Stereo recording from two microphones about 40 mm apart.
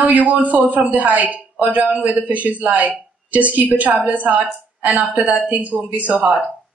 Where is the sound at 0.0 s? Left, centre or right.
Right.